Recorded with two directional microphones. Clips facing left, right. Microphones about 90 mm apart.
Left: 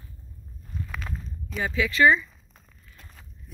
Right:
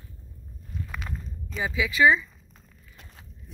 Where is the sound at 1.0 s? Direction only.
5° left (ahead or behind).